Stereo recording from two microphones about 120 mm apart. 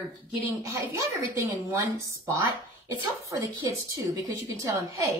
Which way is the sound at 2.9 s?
30° right (ahead or behind).